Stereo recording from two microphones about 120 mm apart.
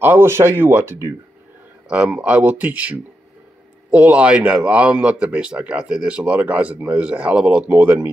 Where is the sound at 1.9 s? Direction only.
10° right (ahead or behind).